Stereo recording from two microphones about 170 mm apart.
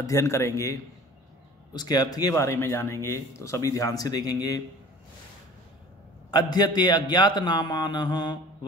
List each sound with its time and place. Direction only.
0.0 s a man's voice: 15° left (ahead or behind)
6.3 s a man's voice: 25° left (ahead or behind)